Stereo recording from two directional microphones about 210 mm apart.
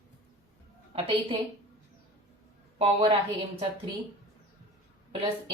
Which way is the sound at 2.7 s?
25° right (ahead or behind).